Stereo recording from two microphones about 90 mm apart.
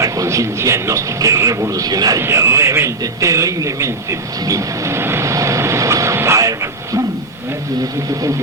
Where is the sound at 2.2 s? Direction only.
30° right (ahead or behind).